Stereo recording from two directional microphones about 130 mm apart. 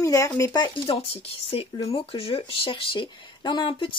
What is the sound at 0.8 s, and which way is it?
A woman's voice, 45° left (ahead or behind).